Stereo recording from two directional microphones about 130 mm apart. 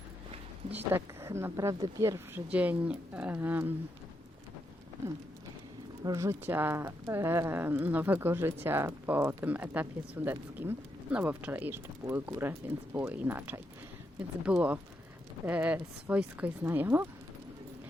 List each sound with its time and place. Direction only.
0.7 s speech: 15° right (ahead or behind)
6.0 s speech: 25° right (ahead or behind)